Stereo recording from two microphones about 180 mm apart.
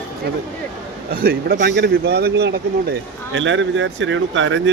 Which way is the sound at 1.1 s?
60° right (ahead or behind).